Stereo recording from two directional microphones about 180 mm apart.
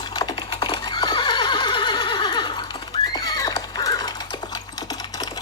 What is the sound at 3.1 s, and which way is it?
Horse, 20° left (ahead or behind).